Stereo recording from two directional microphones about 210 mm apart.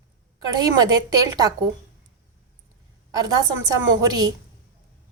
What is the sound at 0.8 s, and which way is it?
Speech, 20° right (ahead or behind).